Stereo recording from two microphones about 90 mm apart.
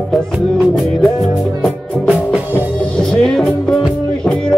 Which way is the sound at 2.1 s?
15° right (ahead or behind).